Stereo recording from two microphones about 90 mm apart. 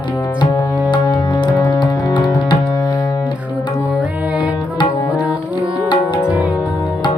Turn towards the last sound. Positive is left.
turn(degrees=-10)  # may be behind; listen again after turning